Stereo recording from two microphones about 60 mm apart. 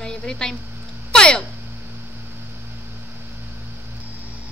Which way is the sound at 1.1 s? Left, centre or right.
Centre.